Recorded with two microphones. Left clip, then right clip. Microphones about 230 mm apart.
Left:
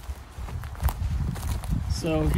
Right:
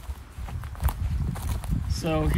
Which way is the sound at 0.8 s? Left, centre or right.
Centre.